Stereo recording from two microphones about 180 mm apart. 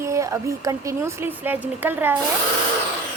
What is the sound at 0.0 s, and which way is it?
Speech, 15° right (ahead or behind).